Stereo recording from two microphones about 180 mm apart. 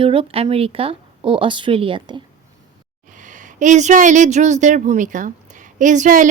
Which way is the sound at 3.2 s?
45° right (ahead or behind).